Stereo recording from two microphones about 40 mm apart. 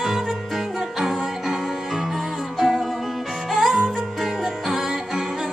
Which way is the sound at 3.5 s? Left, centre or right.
Centre.